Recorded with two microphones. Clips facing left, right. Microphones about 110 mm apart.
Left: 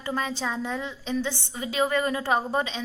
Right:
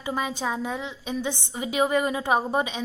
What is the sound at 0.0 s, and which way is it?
A woman's voice, 15° right (ahead or behind).